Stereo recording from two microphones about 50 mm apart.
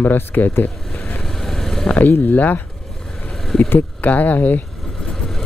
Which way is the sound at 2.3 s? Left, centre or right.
Left.